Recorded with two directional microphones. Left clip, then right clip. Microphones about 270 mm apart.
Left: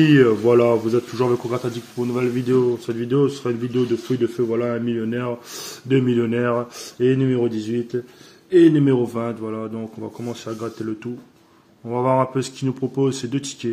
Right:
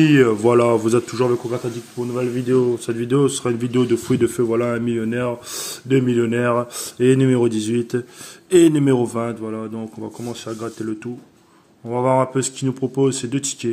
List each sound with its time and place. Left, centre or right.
0.0 s speech: centre
1.1 s speech: centre
2.9 s speech: centre